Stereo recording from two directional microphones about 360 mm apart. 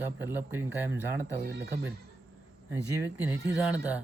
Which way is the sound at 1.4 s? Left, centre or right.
Right.